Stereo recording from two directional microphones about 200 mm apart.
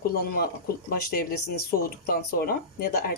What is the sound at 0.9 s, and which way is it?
Speech, 50° left (ahead or behind).